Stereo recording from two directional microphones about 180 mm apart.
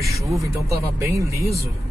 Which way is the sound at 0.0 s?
15° right (ahead or behind).